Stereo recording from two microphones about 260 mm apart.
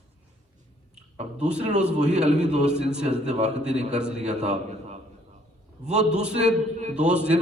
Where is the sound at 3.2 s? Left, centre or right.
Right.